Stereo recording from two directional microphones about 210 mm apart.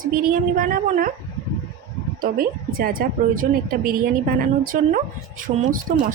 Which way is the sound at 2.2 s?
45° right (ahead or behind).